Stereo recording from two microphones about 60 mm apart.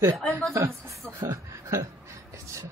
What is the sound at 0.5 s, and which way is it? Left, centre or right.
A woman's voice, right.